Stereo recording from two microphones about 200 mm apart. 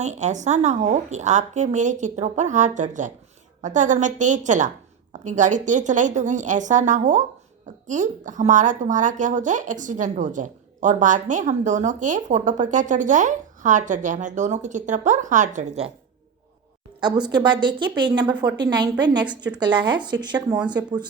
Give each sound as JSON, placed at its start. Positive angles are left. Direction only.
{"t": 0.0, "sound": "a woman's voice", "side_deg": -35}
{"t": 17.0, "sound": "speech", "side_deg": -20}